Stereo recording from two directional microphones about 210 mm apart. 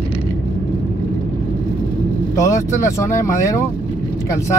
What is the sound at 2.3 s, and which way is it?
Speech, 15° left (ahead or behind).